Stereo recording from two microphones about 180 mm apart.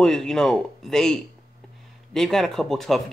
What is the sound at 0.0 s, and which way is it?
Speech, 5° left (ahead or behind).